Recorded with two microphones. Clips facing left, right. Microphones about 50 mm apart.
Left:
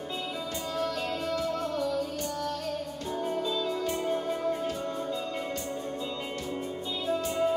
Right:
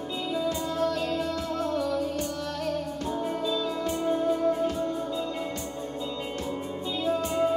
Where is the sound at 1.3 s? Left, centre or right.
Right.